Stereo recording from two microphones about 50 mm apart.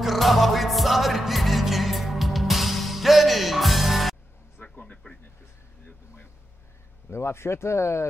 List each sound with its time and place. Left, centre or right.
0.0 s music: centre
4.6 s a sound: left
5.0 s speech: left
7.1 s speech: left